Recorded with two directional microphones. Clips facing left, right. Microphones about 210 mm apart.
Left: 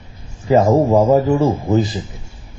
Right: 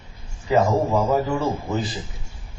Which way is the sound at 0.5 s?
40° left (ahead or behind).